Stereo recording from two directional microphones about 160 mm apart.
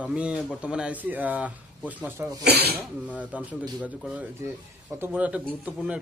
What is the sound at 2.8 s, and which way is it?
Speech, 10° right (ahead or behind).